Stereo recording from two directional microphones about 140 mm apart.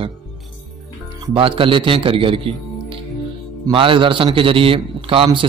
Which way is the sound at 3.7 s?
40° right (ahead or behind).